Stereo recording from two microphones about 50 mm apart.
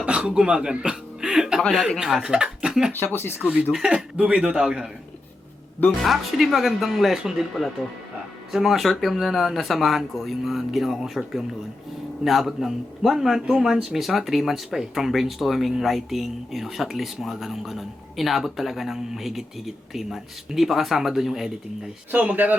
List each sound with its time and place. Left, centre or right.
0.0 s speech: right
3.0 s speech: left
3.4 s speech: centre
6.0 s a man's voice: centre
8.5 s a man's voice: centre
22.1 s speech: right